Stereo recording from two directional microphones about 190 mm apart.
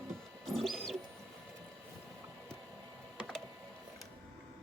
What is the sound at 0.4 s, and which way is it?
Bird, centre (ahead or behind).